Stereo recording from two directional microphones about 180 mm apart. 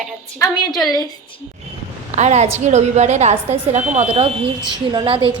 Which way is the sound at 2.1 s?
40° right (ahead or behind).